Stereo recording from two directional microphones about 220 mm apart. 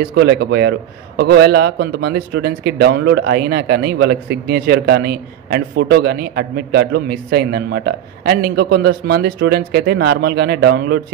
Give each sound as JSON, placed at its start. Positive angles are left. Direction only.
{"t": 0.1, "sound": "a man's voice", "side_deg": -50}